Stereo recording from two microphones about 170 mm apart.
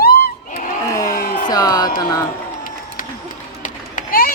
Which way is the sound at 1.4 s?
20° left (ahead or behind).